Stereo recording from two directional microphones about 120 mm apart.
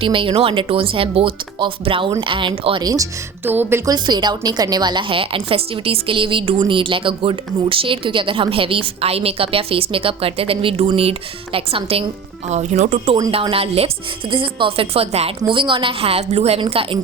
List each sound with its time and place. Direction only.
0.0 s speech: 45° right (ahead or behind)
3.4 s speech: 15° right (ahead or behind)
3.8 s speech: 35° right (ahead or behind); by 12.0 s 55° right (ahead or behind)
12.5 s speech: 65° right (ahead or behind)
13.5 s speech: 55° right (ahead or behind)
15.4 s speech: 45° right (ahead or behind)